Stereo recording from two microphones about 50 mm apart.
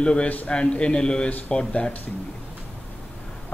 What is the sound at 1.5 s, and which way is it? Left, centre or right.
Speech, left.